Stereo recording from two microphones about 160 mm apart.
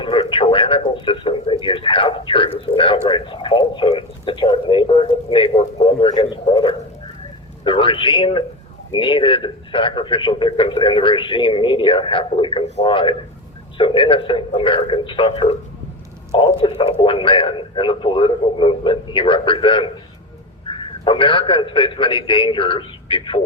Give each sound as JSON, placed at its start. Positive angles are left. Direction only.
{"t": 0.0, "sound": "a man's voice", "side_deg": 30}